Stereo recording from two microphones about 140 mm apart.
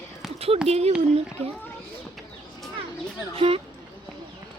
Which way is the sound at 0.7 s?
45° right (ahead or behind).